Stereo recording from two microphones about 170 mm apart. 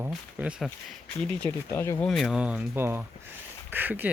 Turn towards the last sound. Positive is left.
turn(degrees=-10)  # may be behind; listen again after turning